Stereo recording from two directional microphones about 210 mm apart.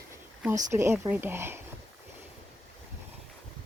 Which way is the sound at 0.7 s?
15° right (ahead or behind).